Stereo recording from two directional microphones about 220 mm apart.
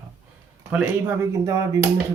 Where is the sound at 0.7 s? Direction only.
5° right (ahead or behind).